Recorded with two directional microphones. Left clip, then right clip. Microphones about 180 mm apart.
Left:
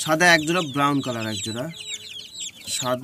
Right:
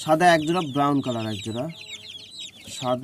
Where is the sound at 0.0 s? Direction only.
20° right (ahead or behind).